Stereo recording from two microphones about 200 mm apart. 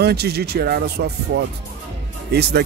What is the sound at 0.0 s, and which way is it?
Speech, 55° right (ahead or behind).